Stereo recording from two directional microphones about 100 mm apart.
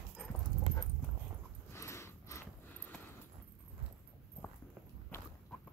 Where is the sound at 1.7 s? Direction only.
30° left (ahead or behind).